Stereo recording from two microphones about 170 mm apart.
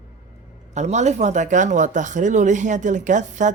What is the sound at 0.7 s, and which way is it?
Speech, 40° right (ahead or behind).